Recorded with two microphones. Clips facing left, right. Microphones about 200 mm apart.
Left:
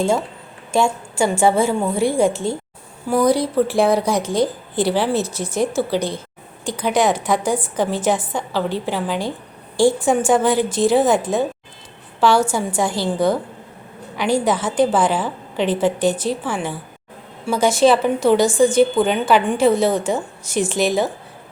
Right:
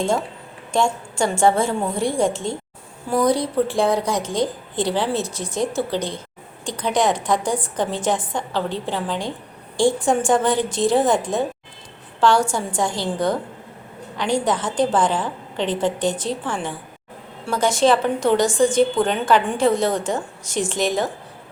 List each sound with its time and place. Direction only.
0.0 s a woman's voice: 5° left (ahead or behind)